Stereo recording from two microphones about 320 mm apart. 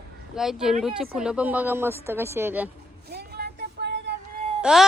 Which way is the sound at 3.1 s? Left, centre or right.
Right.